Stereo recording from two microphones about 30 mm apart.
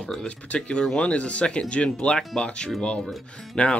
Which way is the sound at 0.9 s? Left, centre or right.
Left.